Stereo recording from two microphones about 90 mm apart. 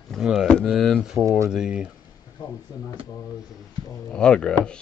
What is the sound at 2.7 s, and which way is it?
Speech, 40° left (ahead or behind).